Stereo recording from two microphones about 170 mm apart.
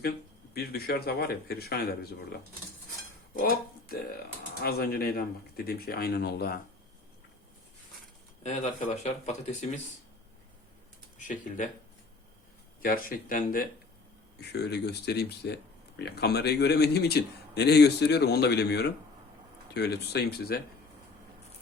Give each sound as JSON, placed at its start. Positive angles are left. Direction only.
{"t": 0.5, "sound": "speech", "side_deg": 65}
{"t": 4.6, "sound": "speech", "side_deg": 65}
{"t": 8.4, "sound": "speech", "side_deg": 40}
{"t": 11.3, "sound": "speech", "side_deg": 50}
{"t": 12.8, "sound": "speech", "side_deg": 55}
{"t": 14.5, "sound": "speech", "side_deg": 75}